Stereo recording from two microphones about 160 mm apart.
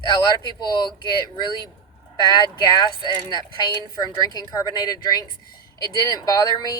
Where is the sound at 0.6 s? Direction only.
25° left (ahead or behind).